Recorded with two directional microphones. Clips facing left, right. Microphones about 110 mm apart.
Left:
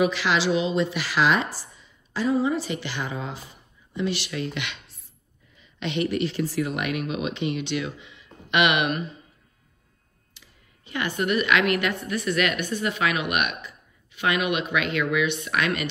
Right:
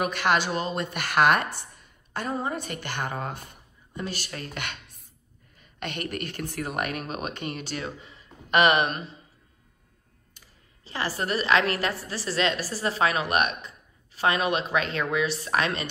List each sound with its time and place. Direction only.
0.0 s speech: 50° right (ahead or behind)
4.0 s a woman's voice: 40° right (ahead or behind)
10.4 s clicking: 45° right (ahead or behind)
10.8 s a woman's voice: 30° right (ahead or behind)